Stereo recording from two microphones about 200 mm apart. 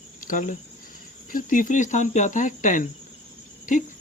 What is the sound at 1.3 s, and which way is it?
Cricket, 40° left (ahead or behind).